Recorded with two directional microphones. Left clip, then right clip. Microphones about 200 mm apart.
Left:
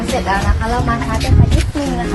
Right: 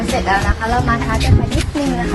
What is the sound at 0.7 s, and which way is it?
Speech, centre (ahead or behind).